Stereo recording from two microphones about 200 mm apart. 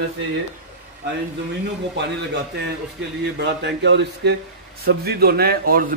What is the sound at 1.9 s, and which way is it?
A man's voice, 60° right (ahead or behind).